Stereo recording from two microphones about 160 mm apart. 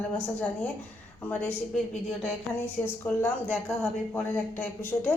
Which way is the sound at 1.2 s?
10° left (ahead or behind).